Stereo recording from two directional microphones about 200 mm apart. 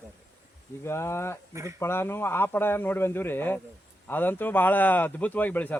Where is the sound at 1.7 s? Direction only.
10° left (ahead or behind).